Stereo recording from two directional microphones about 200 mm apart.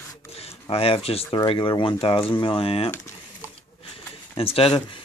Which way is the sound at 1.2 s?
20° left (ahead or behind).